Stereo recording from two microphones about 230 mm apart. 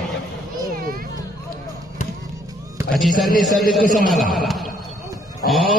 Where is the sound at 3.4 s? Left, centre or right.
Centre.